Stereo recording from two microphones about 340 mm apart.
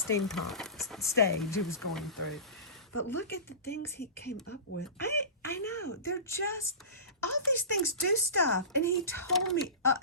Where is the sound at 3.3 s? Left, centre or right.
Left.